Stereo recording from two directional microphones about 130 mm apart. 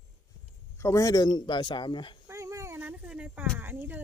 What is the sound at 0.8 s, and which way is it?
A man's voice, 20° left (ahead or behind).